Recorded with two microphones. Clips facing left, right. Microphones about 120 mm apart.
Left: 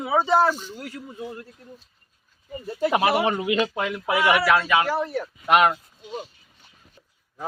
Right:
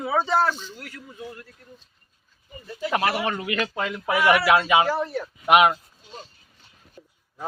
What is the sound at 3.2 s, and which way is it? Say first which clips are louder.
Speech: left 4 dB; 20° left (ahead or behind).